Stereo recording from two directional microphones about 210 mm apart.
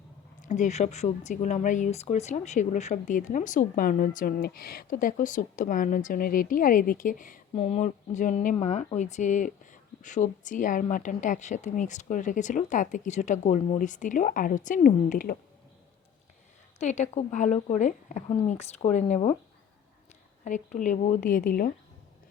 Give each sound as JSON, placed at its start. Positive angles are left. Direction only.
{"t": 0.4, "sound": "speech", "side_deg": 35}
{"t": 16.8, "sound": "speech", "side_deg": 35}
{"t": 20.4, "sound": "speech", "side_deg": 35}